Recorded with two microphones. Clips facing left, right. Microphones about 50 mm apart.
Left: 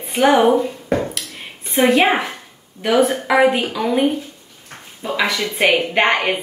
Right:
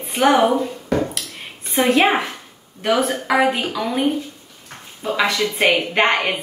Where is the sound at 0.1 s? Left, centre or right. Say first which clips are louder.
Left 1 dB; left.